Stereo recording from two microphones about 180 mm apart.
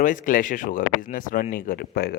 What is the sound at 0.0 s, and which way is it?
Speech, 45° left (ahead or behind).